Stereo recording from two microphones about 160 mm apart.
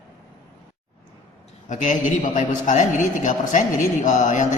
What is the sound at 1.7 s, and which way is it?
A man's voice, 50° left (ahead or behind).